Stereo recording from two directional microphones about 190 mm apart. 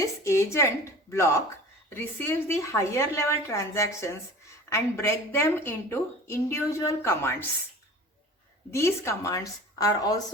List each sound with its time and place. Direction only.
0.0 s a woman's voice: 15° left (ahead or behind)
8.7 s a woman's voice: 15° left (ahead or behind)